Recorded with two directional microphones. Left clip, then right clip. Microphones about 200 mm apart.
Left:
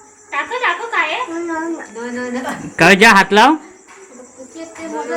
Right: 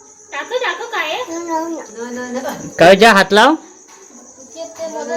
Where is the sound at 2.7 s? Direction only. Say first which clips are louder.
Right 1 dB; centre (ahead or behind).